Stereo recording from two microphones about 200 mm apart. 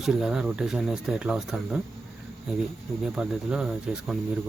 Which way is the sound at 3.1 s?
5° right (ahead or behind).